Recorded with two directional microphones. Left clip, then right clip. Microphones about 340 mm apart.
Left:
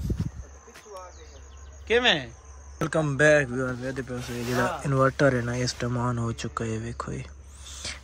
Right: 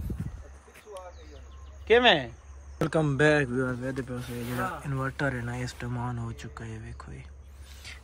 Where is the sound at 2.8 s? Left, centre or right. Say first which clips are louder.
Left 2 dB; centre.